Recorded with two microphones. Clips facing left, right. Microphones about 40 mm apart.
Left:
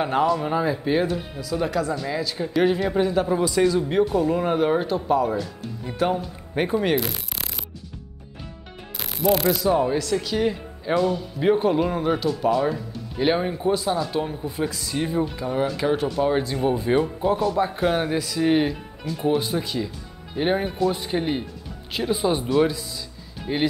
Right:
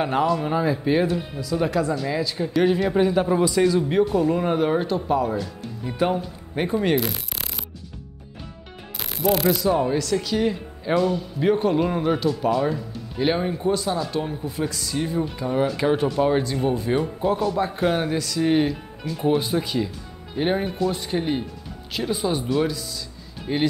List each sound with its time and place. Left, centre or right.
0.0 s speech: centre
8.9 s speech: centre
15.2 s speech: centre
23.4 s speech: centre